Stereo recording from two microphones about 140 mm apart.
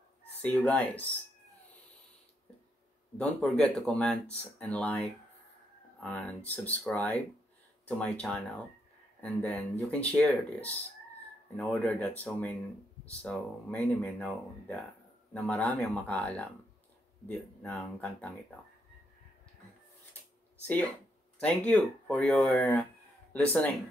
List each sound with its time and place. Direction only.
0.4 s speech: 10° left (ahead or behind)
3.2 s speech: 5° left (ahead or behind)
6.0 s speech: 10° left (ahead or behind)
21.4 s speech: 10° left (ahead or behind)